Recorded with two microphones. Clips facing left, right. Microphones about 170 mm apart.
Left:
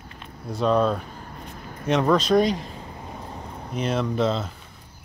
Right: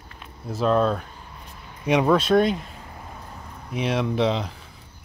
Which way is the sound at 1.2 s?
50° left (ahead or behind).